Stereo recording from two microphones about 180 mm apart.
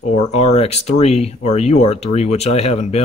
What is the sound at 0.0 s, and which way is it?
Speech, 40° left (ahead or behind).